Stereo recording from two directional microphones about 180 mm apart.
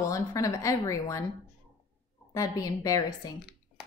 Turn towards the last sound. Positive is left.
turn(degrees=20)  # may be behind; listen again after turning